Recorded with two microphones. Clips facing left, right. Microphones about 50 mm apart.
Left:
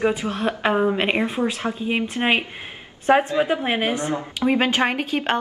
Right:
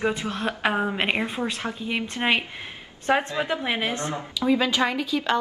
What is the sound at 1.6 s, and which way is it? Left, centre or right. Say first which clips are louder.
A woman's voice: left 5 dB; left.